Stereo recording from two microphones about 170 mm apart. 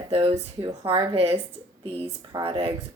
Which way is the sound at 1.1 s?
35° right (ahead or behind).